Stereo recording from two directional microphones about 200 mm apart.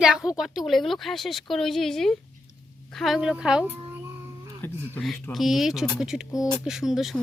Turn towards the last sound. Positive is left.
turn(degrees=0)  # may be behind; listen again after turning